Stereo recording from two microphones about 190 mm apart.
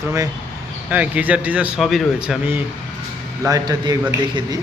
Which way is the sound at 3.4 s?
20° right (ahead or behind).